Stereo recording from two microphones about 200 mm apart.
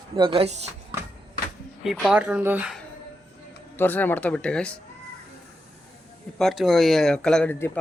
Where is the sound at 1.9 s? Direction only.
Centre (ahead or behind).